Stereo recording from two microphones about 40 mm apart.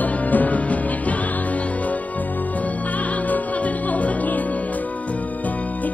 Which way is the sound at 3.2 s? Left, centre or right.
Left.